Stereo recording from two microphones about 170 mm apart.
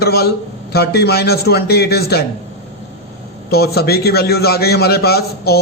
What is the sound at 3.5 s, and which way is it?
A man's voice, 65° left (ahead or behind).